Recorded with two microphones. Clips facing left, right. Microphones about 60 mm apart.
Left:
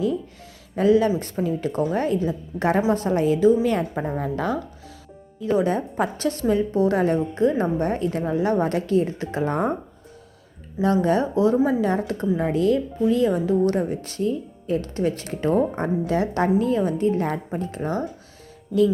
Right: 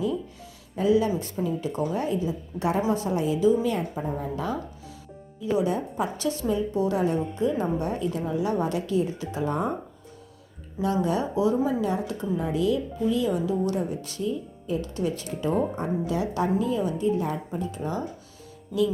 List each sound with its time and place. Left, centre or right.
0.8 s a woman's voice: left
10.8 s speech: left